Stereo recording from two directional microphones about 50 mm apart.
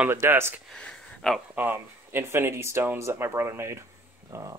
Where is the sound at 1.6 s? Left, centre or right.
Right.